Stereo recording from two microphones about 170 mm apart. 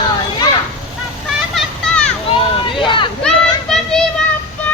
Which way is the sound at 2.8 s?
30° left (ahead or behind).